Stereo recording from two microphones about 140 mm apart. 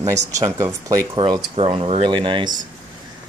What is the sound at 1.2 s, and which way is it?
Speech, 40° right (ahead or behind).